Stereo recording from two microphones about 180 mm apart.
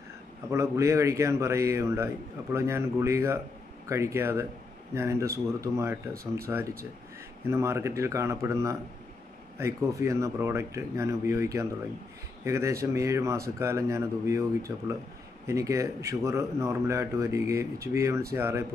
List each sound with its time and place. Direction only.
0.5 s a man's voice: 15° right (ahead or behind)